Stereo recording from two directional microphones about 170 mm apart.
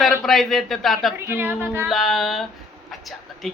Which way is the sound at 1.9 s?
Centre (ahead or behind).